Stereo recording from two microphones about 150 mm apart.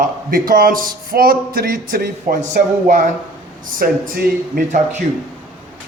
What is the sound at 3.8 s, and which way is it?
Speech, 75° right (ahead or behind).